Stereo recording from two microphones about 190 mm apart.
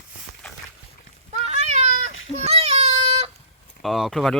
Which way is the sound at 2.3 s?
35° right (ahead or behind).